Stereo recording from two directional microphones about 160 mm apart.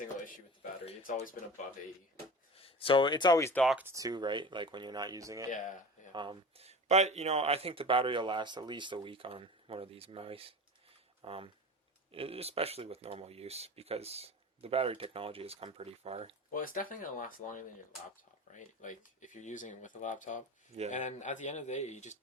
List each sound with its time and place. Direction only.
1.1 s speech: 55° left (ahead or behind)
2.6 s speech: 35° left (ahead or behind)
3.5 s speech: centre (ahead or behind)
3.8 s speech: 20° right (ahead or behind)
5.5 s speech: 50° left (ahead or behind)
6.1 s speech: 35° right (ahead or behind)
16.5 s speech: 60° left (ahead or behind)